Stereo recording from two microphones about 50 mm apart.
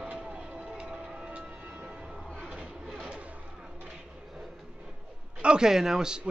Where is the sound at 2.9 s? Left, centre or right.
Right.